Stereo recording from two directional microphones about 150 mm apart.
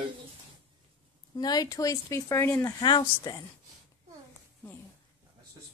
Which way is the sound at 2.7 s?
30° left (ahead or behind).